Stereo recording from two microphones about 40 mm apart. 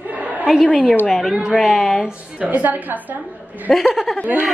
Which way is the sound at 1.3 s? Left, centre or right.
Centre.